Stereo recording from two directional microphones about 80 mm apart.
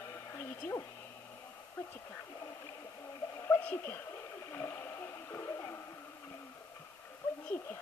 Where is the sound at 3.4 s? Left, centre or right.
Left.